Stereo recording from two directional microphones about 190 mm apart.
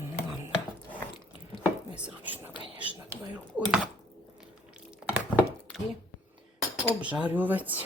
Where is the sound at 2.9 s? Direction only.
10° right (ahead or behind).